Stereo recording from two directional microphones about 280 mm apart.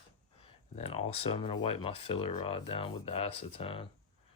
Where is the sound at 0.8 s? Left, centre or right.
Left.